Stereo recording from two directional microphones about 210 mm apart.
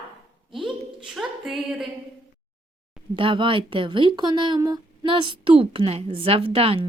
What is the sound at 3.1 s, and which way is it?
Speech, 25° right (ahead or behind).